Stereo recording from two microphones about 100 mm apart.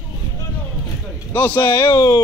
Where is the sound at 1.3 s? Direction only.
20° left (ahead or behind).